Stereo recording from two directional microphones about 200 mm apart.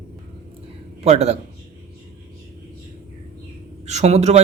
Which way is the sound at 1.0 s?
35° right (ahead or behind).